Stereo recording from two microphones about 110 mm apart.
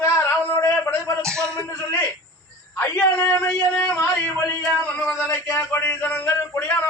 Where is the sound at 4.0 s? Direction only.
25° left (ahead or behind).